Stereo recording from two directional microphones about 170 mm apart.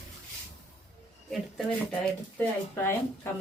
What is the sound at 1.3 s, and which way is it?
Speech, centre (ahead or behind).